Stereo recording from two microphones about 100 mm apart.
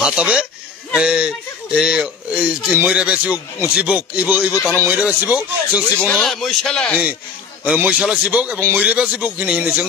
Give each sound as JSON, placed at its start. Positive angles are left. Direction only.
{"t": 0.0, "sound": "speech", "side_deg": -10}
{"t": 4.7, "sound": "speech", "side_deg": -25}
{"t": 6.2, "sound": "speech", "side_deg": 5}
{"t": 7.6, "sound": "speech", "side_deg": -15}